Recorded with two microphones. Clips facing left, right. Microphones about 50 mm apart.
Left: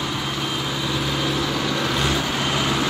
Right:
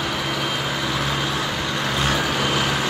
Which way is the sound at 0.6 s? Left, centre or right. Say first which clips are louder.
Right 1 dB; right.